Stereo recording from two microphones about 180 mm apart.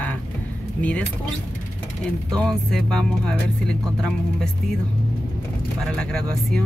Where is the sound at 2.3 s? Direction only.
5° left (ahead or behind).